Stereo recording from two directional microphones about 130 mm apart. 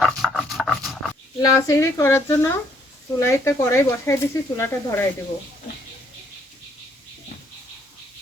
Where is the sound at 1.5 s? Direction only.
25° left (ahead or behind).